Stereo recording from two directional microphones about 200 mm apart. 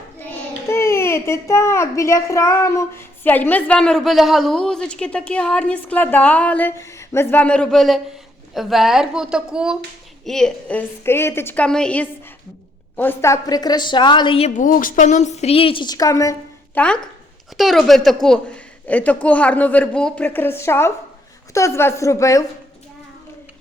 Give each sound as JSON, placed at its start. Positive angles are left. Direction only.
{"t": 0.3, "sound": "a child's voice", "side_deg": 15}